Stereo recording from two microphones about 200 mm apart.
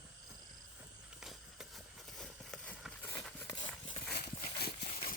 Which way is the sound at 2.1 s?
5° left (ahead or behind).